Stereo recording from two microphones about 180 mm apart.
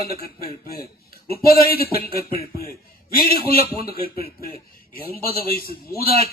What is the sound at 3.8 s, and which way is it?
A man's voice, 55° left (ahead or behind).